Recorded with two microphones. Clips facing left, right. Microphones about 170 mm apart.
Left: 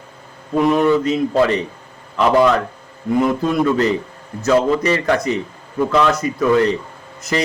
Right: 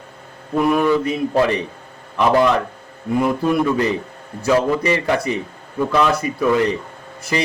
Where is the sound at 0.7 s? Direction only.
20° left (ahead or behind).